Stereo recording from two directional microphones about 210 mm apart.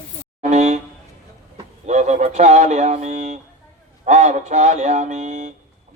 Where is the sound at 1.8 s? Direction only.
35° right (ahead or behind).